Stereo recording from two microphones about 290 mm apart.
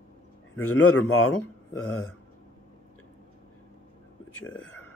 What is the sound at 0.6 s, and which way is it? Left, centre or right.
Speech, left.